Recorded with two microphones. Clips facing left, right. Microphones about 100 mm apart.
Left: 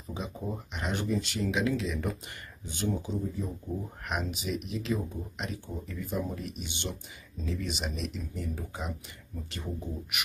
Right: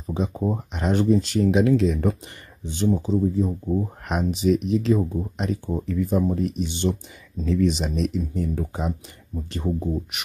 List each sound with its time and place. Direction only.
0.0 s speech: 35° right (ahead or behind)
2.6 s speech: 30° right (ahead or behind)